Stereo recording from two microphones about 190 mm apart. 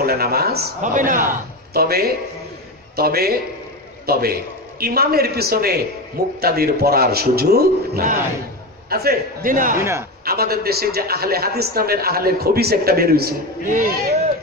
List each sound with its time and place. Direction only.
0.0 s a man's voice: 55° right (ahead or behind)
9.8 s a man's voice: 15° right (ahead or behind)
10.2 s a man's voice: 55° right (ahead or behind)